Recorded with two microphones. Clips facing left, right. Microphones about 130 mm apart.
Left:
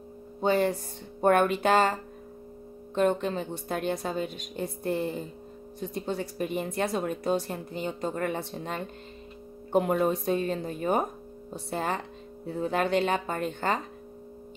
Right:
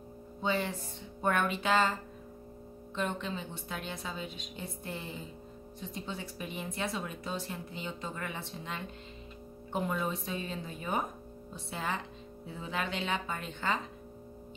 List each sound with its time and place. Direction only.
0.4 s speech: 45° left (ahead or behind)